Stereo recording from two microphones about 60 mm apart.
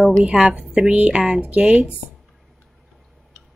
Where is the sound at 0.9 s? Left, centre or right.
Right.